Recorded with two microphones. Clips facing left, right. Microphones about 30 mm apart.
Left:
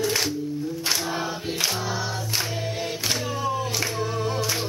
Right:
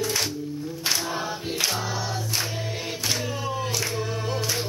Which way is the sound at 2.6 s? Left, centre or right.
Centre.